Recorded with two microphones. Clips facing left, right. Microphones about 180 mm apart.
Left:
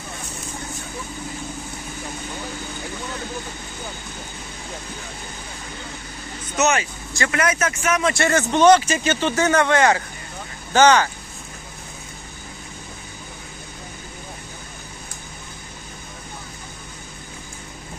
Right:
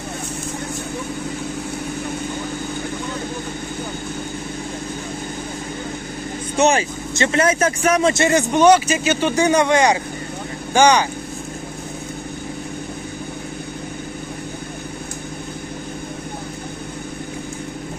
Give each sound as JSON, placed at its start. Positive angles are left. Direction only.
{"t": 6.6, "sound": "speech", "side_deg": -30}
{"t": 8.1, "sound": "speech", "side_deg": -15}